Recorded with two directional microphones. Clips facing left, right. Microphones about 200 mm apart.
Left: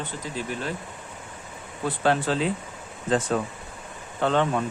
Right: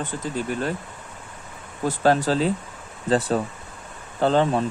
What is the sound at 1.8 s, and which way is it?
Speech, 40° right (ahead or behind).